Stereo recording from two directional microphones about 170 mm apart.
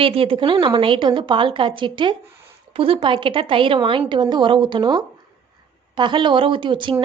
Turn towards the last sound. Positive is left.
turn(degrees=-30)  # may be behind; listen again after turning